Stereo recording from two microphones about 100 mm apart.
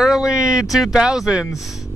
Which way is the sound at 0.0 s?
5° right (ahead or behind).